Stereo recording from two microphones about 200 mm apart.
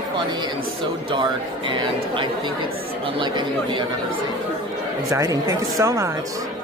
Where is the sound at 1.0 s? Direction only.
25° right (ahead or behind).